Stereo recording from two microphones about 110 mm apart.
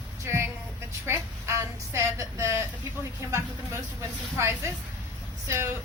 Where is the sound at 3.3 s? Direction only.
25° right (ahead or behind).